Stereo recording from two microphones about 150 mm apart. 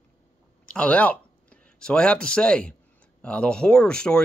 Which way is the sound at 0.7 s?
10° left (ahead or behind).